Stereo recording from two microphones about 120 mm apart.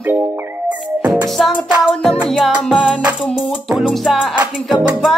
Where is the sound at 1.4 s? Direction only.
Centre (ahead or behind).